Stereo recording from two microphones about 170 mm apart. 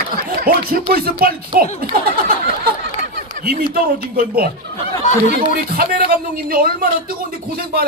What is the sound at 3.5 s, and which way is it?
Speech, 60° right (ahead or behind).